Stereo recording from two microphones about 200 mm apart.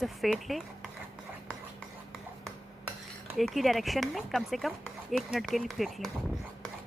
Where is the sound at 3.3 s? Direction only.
Centre (ahead or behind).